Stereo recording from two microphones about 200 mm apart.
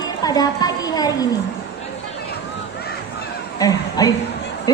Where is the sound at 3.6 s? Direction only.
20° left (ahead or behind).